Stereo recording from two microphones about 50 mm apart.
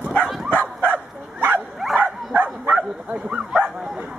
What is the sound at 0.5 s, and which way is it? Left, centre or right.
Bow-wow, left.